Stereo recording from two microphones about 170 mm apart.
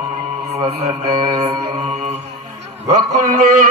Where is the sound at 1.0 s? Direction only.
40° right (ahead or behind).